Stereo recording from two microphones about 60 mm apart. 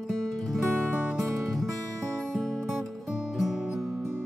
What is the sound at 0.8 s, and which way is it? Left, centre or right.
Music, right.